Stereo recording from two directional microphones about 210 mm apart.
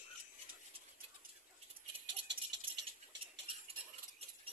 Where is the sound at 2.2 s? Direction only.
55° right (ahead or behind).